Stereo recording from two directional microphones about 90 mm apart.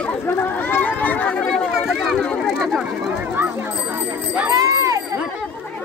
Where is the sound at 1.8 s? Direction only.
5° right (ahead or behind).